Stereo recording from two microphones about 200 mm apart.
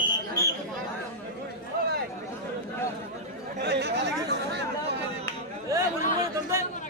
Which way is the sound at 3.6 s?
55° right (ahead or behind).